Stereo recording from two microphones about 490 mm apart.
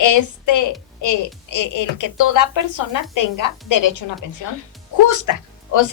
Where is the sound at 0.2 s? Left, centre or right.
Left.